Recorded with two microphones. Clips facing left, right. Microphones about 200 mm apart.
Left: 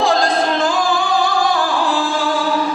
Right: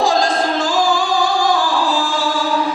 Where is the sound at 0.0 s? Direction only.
55° left (ahead or behind).